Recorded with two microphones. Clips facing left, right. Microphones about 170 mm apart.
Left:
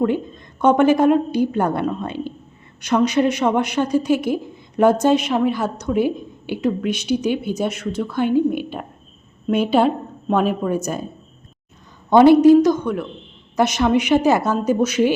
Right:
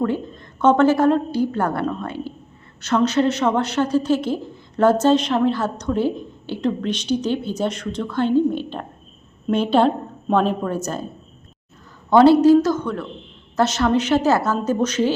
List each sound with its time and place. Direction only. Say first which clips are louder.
0.0 s speech: left 3 dB; 15° left (ahead or behind)
12.1 s speech: left 2 dB; 15° left (ahead or behind)